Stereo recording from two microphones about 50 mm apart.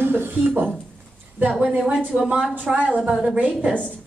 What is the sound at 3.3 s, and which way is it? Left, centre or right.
Speech, right.